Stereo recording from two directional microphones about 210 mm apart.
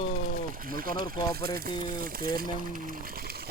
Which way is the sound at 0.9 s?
20° left (ahead or behind).